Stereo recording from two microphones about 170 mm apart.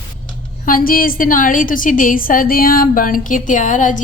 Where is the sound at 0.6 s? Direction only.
55° left (ahead or behind).